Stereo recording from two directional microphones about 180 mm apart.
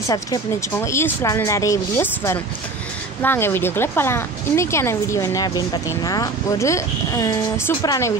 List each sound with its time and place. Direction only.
0.1 s speech: 20° left (ahead or behind)